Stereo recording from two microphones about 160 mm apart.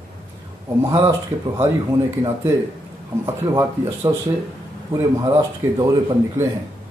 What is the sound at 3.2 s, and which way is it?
A man's voice, 20° right (ahead or behind).